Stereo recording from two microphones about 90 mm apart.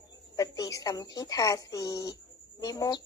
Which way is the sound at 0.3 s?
40° left (ahead or behind).